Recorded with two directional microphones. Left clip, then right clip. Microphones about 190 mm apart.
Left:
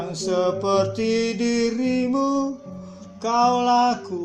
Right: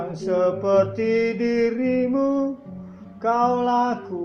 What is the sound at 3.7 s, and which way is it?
Music, 45° left (ahead or behind).